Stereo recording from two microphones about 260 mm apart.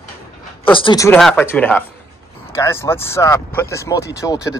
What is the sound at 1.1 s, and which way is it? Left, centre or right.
Speech, centre.